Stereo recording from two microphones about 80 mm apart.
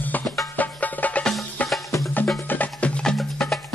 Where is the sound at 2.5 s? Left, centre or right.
Centre.